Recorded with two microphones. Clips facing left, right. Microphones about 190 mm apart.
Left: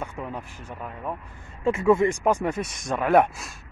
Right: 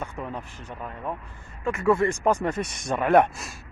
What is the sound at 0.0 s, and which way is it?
Speech, 10° left (ahead or behind).